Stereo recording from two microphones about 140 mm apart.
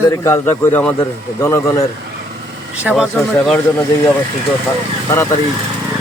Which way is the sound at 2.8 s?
10° right (ahead or behind).